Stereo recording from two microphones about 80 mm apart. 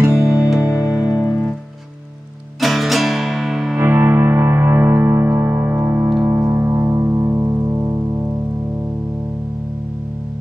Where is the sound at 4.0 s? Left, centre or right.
Right.